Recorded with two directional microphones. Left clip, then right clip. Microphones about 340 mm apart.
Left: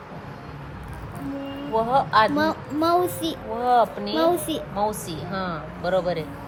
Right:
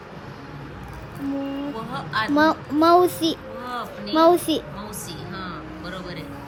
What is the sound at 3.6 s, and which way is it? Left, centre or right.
A woman's voice, centre.